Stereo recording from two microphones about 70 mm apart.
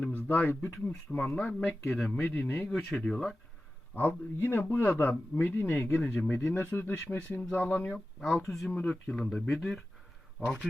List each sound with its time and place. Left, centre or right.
0.0 s speech: left
2.4 s speech: centre
3.9 s speech: left
7.9 s speech: centre
8.7 s speech: centre
10.4 s speech: right